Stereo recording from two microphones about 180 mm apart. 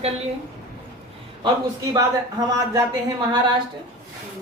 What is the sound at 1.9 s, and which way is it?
Speech, 20° right (ahead or behind).